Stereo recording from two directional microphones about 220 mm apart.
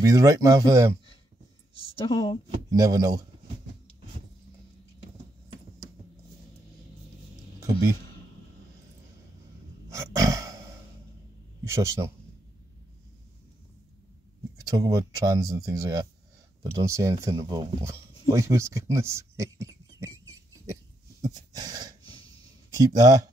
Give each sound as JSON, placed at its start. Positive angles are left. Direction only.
{"t": 0.0, "sound": "speech", "side_deg": -15}
{"t": 2.0, "sound": "speech", "side_deg": 20}
{"t": 2.5, "sound": "speech", "side_deg": -15}
{"t": 9.8, "sound": "a sound", "side_deg": -15}
{"t": 11.6, "sound": "speech", "side_deg": -15}
{"t": 14.7, "sound": "speech", "side_deg": -15}
{"t": 21.2, "sound": "a sound", "side_deg": -15}
{"t": 22.7, "sound": "speech", "side_deg": -15}